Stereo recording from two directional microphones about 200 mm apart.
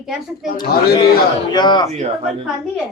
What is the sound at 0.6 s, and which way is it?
Speech, 50° left (ahead or behind).